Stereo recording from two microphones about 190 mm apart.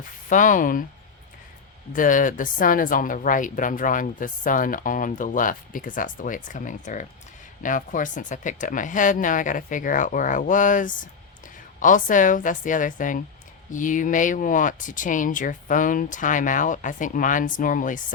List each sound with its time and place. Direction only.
0.3 s speech: 40° left (ahead or behind)
1.9 s speech: 45° left (ahead or behind)